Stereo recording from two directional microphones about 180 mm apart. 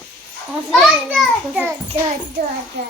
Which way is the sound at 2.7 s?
70° right (ahead or behind).